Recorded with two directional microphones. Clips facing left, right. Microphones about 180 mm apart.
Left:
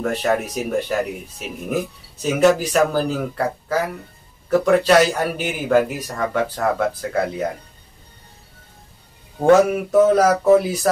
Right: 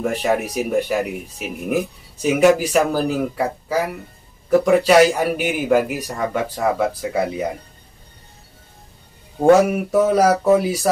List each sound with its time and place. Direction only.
0.0 s speech: 10° right (ahead or behind)
2.2 s speech: 10° right (ahead or behind)
9.4 s speech: 10° right (ahead or behind)